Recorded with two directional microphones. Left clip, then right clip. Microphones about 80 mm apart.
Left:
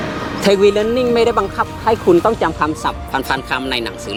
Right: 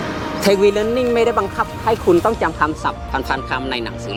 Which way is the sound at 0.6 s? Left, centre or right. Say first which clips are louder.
Left 2 dB; centre.